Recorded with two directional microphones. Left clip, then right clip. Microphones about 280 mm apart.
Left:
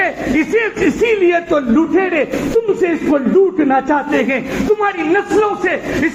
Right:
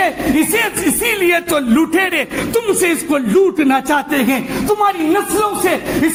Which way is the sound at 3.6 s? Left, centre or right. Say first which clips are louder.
Even; right.